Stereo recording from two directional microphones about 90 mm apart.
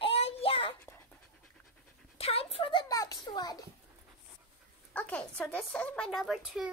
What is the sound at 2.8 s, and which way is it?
Speech, 40° left (ahead or behind).